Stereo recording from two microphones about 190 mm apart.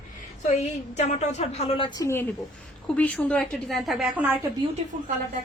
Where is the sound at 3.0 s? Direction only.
5° left (ahead or behind).